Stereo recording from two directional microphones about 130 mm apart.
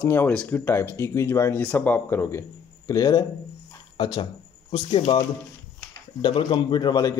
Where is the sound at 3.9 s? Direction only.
40° left (ahead or behind).